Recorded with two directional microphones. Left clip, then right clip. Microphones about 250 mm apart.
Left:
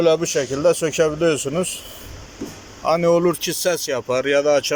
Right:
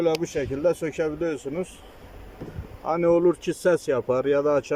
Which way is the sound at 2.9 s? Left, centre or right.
Centre.